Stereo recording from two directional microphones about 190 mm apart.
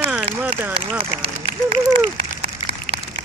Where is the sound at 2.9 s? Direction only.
60° right (ahead or behind).